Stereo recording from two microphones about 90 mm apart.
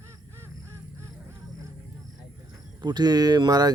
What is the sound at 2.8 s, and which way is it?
Speech, 50° right (ahead or behind).